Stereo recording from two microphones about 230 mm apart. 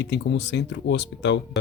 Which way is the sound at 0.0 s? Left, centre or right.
Left.